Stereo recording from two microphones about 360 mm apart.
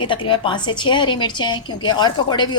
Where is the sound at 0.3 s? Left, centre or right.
Centre.